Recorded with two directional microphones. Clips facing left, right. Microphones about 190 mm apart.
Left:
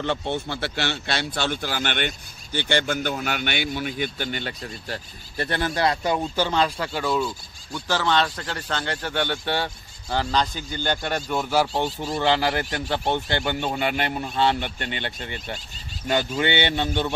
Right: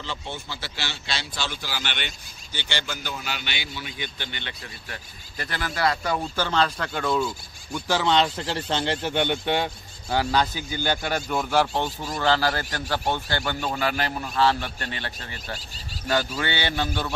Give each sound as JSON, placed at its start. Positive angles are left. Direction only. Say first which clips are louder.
{"t": 0.0, "sound": "speech", "louder": "left 9 dB", "side_deg": 60}
{"t": 5.4, "sound": "speech", "louder": "left 3 dB", "side_deg": 25}
{"t": 7.7, "sound": "a man's voice", "louder": "right 1 dB", "side_deg": -15}
{"t": 16.3, "sound": "a man's voice", "louder": "left 4 dB", "side_deg": 25}